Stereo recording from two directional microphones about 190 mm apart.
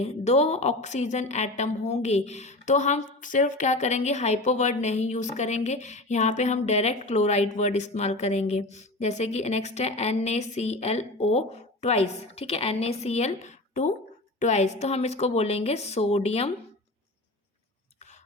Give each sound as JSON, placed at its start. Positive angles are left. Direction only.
{"t": 0.0, "sound": "a woman's voice", "side_deg": 35}